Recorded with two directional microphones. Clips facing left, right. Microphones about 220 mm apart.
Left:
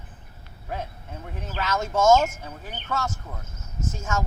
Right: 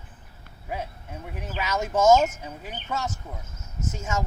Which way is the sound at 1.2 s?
10° right (ahead or behind).